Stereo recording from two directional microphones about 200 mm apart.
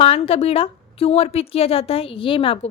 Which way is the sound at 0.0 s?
30° left (ahead or behind).